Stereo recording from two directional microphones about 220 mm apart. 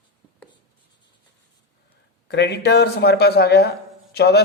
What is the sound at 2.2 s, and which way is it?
Speech, 50° left (ahead or behind).